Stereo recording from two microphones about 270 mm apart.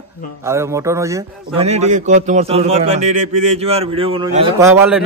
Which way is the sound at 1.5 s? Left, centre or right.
Right.